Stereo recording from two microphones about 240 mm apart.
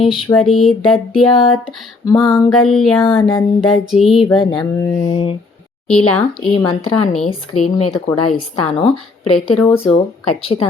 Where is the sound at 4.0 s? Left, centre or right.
Centre.